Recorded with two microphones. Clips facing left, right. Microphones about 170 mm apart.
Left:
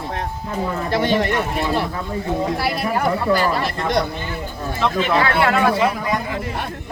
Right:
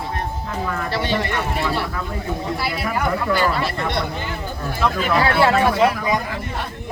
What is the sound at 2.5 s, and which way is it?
Speech, 40° left (ahead or behind).